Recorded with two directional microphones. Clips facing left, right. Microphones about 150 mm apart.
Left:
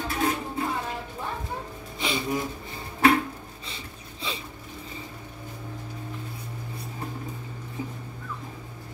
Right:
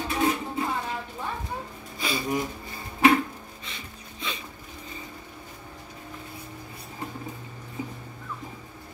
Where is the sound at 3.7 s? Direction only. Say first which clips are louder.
Left 1 dB; 30° left (ahead or behind).